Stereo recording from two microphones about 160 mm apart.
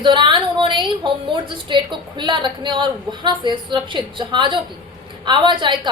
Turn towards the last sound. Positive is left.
turn(degrees=-30)  # may be behind; listen again after turning